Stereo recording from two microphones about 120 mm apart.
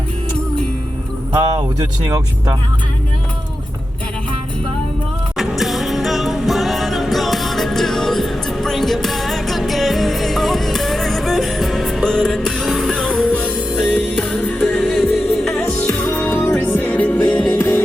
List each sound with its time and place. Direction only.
1.3 s speech: 35° right (ahead or behind)
5.4 s music: centre (ahead or behind)
13.4 s music: 5° right (ahead or behind)
13.9 s music: 10° left (ahead or behind)
14.8 s music: 5° right (ahead or behind)
15.8 s music: 10° left (ahead or behind)
16.0 s music: 20° left (ahead or behind)